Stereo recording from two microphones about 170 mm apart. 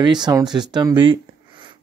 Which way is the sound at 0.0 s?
25° right (ahead or behind).